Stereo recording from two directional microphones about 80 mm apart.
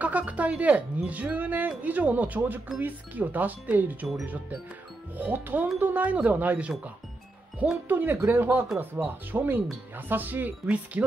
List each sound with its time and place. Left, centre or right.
0.0 s speech: centre
5.1 s speech: right
7.9 s speech: right